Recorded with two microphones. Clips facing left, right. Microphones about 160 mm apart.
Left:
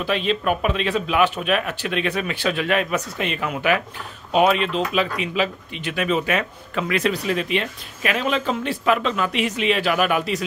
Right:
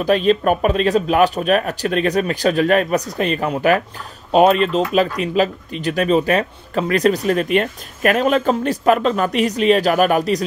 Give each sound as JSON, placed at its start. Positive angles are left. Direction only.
{"t": 0.0, "sound": "speech", "side_deg": -40}